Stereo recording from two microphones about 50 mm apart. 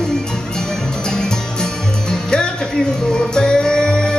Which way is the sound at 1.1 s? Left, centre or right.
Centre.